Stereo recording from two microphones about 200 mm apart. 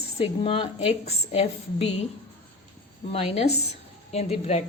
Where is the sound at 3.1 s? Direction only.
30° left (ahead or behind).